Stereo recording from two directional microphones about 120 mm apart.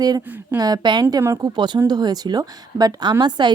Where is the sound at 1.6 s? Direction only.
40° right (ahead or behind).